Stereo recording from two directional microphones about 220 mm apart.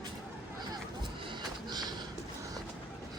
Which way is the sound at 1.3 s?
20° right (ahead or behind).